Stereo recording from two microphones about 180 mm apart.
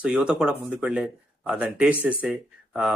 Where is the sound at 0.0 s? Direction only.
5° right (ahead or behind).